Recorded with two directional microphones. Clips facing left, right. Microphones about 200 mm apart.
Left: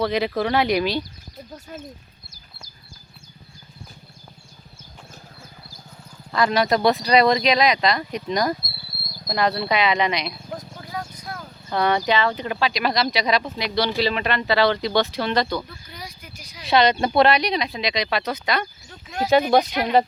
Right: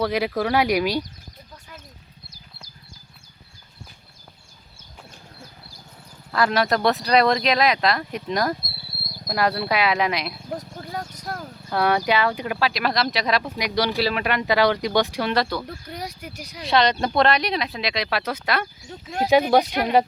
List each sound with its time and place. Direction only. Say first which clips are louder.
0.0 s speech: left 1 dB; 10° right (ahead or behind)
1.5 s a sound: left 8 dB; 40° left (ahead or behind)
6.3 s speech: left 1 dB; centre (ahead or behind)
10.8 s a sound: right 1 dB; 40° right (ahead or behind)
11.7 s speech: even; 5° right (ahead or behind)
13.6 s speech: even; 10° right (ahead or behind)
15.6 s speech: right 6 dB; 60° right (ahead or behind)
16.6 s speech: left 2 dB; 5° left (ahead or behind)